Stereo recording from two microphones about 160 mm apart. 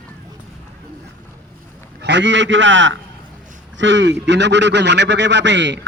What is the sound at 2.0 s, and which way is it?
Speech, 90° right.